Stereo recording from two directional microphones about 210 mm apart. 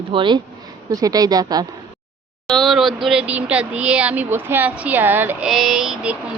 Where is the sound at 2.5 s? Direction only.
Centre (ahead or behind).